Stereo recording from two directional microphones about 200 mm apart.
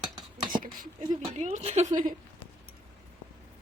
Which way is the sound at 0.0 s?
20° right (ahead or behind).